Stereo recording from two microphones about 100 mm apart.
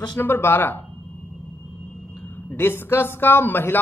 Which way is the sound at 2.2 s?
20° left (ahead or behind).